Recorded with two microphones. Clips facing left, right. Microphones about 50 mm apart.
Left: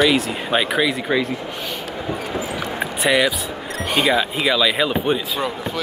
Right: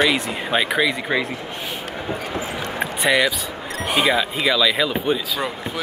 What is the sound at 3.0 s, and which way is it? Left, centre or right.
Speech, centre.